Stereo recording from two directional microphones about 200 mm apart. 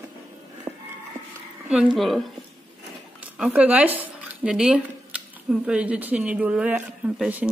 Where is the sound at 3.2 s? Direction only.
5° right (ahead or behind).